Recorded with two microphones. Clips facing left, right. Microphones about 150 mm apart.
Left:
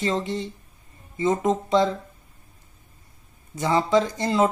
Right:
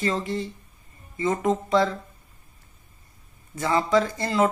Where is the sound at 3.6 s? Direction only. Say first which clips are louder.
Left 1 dB; 20° left (ahead or behind).